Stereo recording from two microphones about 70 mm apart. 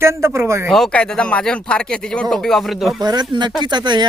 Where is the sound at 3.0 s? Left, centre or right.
Right.